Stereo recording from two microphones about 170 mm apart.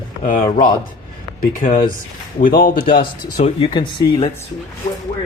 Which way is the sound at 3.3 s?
35° left (ahead or behind).